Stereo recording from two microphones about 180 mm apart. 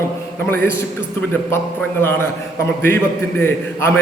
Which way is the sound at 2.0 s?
10° left (ahead or behind).